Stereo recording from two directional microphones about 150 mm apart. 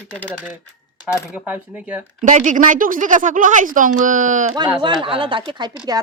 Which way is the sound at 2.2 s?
55° right (ahead or behind).